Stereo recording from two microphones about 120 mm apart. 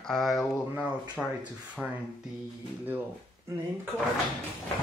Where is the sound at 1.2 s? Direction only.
5° left (ahead or behind).